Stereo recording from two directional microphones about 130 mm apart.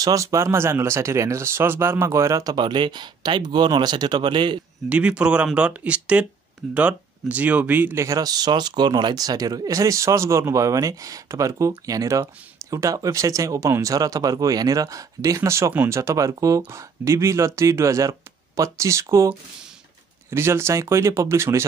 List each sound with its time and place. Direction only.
0.0 s speech: 25° right (ahead or behind)
4.8 s speech: 10° right (ahead or behind)